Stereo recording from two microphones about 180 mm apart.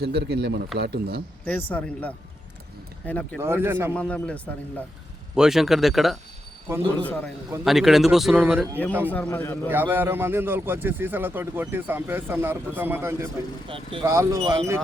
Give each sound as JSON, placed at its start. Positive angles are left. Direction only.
{"t": 0.0, "sound": "speech", "side_deg": -65}
{"t": 1.7, "sound": "a man's voice", "side_deg": 10}
{"t": 3.4, "sound": "a man's voice", "side_deg": -15}
{"t": 3.9, "sound": "a man's voice", "side_deg": 5}
{"t": 9.1, "sound": "a man's voice", "side_deg": 10}
{"t": 9.6, "sound": "a man's voice", "side_deg": -10}
{"t": 13.7, "sound": "speech", "side_deg": -30}
{"t": 14.0, "sound": "a man's voice", "side_deg": -15}
{"t": 14.3, "sound": "speech", "side_deg": -30}